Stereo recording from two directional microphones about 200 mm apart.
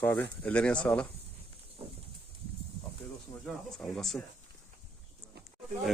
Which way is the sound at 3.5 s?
5° left (ahead or behind).